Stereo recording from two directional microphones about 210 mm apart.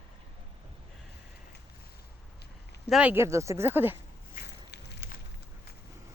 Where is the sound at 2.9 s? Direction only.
5° right (ahead or behind).